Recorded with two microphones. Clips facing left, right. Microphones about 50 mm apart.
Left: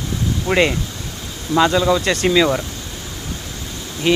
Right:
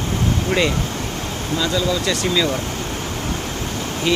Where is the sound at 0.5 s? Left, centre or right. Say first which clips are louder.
Left 5 dB; left.